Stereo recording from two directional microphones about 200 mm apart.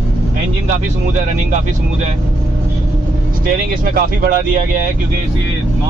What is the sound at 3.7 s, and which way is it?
Speech, 45° right (ahead or behind).